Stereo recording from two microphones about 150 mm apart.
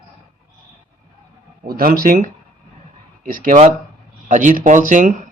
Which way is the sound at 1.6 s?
80° right.